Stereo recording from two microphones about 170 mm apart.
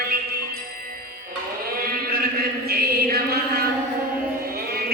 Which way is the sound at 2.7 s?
65° right (ahead or behind).